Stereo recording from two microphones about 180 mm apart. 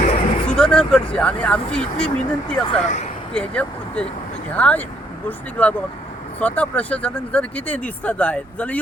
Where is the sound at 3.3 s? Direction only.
5° left (ahead or behind).